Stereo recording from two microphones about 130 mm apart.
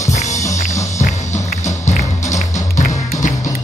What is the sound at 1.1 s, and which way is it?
Music, 65° left (ahead or behind).